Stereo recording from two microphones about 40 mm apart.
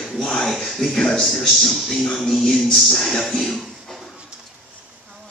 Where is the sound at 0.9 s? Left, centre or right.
Left.